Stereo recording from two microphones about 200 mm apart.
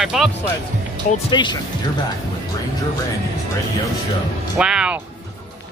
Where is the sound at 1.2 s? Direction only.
25° left (ahead or behind).